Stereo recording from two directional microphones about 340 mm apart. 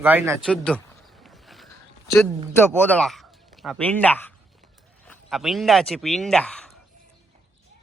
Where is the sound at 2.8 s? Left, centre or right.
Centre.